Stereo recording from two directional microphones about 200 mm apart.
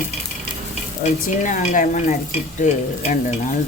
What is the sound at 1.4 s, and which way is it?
Stir, 40° left (ahead or behind).